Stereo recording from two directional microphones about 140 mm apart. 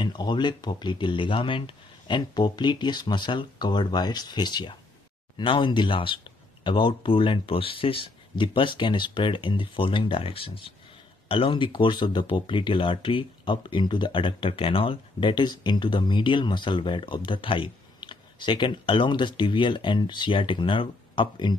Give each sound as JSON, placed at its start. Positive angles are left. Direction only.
{"t": 0.0, "sound": "speech", "side_deg": 35}